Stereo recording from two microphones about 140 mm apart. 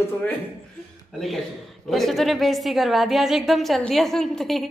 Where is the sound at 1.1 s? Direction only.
Centre (ahead or behind).